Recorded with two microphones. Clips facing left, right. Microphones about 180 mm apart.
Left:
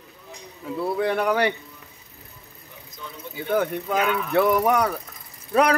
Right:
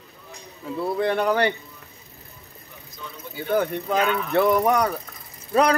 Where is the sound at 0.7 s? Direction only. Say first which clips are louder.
Even; 5° left (ahead or behind).